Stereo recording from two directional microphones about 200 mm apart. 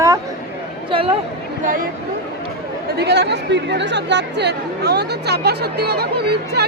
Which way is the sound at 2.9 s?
55° right (ahead or behind).